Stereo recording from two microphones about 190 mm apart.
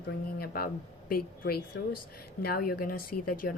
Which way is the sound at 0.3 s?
50° left (ahead or behind).